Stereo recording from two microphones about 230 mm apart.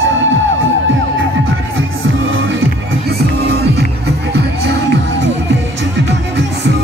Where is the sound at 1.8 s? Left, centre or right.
Right.